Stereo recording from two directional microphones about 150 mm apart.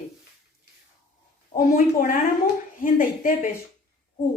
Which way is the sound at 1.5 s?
70° left (ahead or behind).